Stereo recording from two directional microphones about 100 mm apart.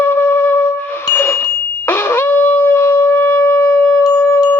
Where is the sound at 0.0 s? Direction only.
20° left (ahead or behind).